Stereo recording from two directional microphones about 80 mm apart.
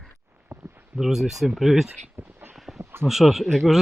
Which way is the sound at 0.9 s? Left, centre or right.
Centre.